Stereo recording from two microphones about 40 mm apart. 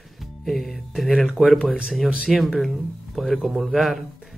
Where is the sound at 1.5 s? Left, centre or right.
Right.